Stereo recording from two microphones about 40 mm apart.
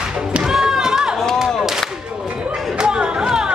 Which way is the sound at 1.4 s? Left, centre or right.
Centre.